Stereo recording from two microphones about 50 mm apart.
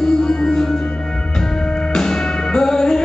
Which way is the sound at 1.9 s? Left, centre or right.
Centre.